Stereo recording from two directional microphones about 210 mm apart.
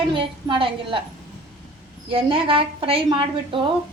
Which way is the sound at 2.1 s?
25° right (ahead or behind).